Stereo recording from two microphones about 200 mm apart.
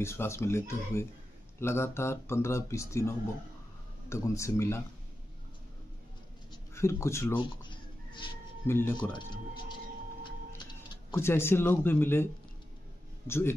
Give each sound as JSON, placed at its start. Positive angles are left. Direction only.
{"t": 0.0, "sound": "speech", "side_deg": 15}
{"t": 6.5, "sound": "speech", "side_deg": 15}
{"t": 7.3, "sound": "a sound", "side_deg": 25}
{"t": 8.6, "sound": "speech", "side_deg": 10}
{"t": 10.5, "sound": "speech", "side_deg": 15}
{"t": 13.3, "sound": "speech", "side_deg": 10}